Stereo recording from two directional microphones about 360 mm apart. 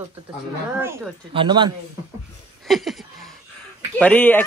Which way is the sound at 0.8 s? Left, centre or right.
Centre.